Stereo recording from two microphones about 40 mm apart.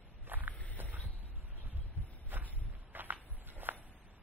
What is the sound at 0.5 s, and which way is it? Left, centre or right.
Walk, left.